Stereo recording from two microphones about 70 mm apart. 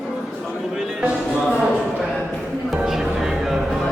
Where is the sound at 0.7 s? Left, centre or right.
Centre.